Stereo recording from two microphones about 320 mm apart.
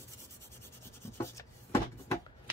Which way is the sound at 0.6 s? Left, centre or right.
Centre.